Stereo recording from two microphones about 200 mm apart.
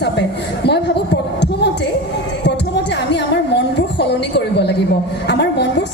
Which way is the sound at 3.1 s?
60° left (ahead or behind).